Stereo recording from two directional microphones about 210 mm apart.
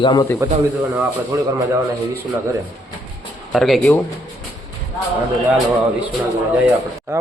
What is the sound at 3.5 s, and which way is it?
Speech, centre (ahead or behind).